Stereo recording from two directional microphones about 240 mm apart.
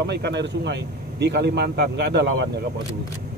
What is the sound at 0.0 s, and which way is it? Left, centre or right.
Speech, right.